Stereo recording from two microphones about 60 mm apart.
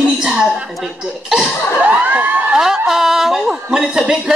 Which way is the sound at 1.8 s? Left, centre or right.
Right.